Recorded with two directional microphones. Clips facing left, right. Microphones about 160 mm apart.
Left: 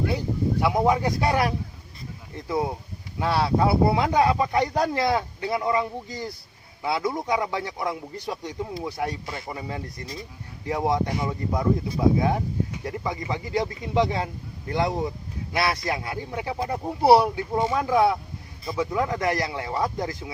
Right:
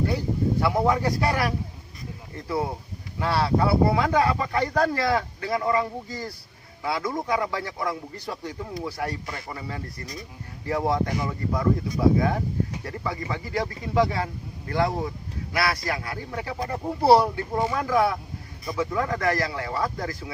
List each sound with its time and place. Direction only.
0.6 s a man's voice: 15° left (ahead or behind)